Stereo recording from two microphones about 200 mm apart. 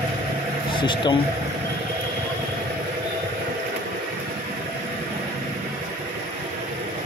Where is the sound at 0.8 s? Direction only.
25° left (ahead or behind).